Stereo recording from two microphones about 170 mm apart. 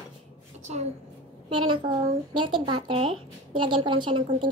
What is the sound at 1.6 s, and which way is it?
A woman's voice, 25° right (ahead or behind).